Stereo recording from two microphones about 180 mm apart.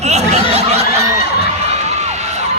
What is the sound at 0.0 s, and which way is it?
Snicker, 40° right (ahead or behind).